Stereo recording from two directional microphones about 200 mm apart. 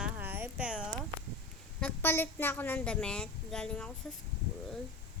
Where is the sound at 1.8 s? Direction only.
10° left (ahead or behind).